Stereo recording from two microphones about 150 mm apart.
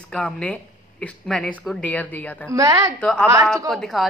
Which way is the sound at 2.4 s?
20° right (ahead or behind).